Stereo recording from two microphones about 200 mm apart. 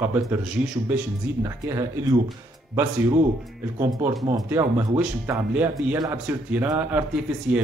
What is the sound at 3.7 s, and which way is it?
A man's voice, 15° right (ahead or behind).